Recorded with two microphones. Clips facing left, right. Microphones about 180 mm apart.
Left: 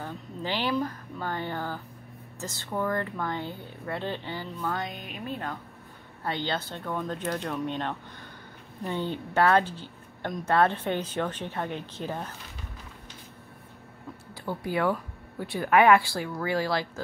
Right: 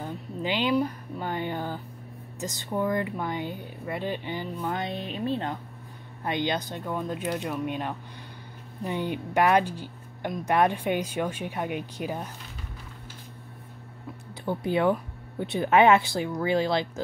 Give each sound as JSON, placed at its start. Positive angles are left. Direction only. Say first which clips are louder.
{"t": 0.0, "sound": "a sound", "louder": "right 3 dB", "side_deg": -15}
{"t": 2.4, "sound": "speech", "louder": "right 2 dB", "side_deg": -15}
{"t": 14.4, "sound": "speech", "louder": "right 3 dB", "side_deg": -20}